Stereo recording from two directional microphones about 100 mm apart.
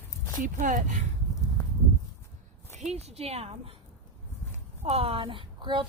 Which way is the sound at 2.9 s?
90° right.